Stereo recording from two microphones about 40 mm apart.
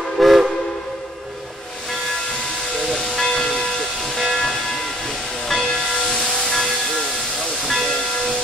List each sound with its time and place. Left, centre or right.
0.2 s train whistle: centre
2.8 s hiss: centre
4.0 s hiss: centre
6.2 s hiss: centre